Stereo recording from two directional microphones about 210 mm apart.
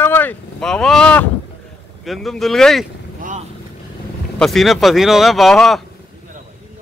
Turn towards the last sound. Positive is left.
turn(degrees=0)  # may be behind; listen again after turning